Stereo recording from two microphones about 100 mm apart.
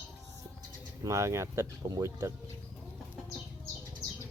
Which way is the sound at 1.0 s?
30° right (ahead or behind).